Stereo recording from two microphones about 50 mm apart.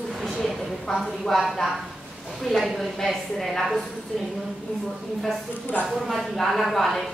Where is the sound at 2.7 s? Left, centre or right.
Centre.